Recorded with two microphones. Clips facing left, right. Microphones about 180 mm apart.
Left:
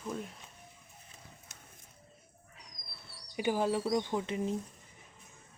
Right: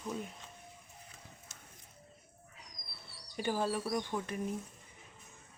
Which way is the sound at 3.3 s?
15° left (ahead or behind).